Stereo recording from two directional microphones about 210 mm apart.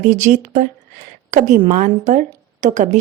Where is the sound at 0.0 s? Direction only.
35° right (ahead or behind).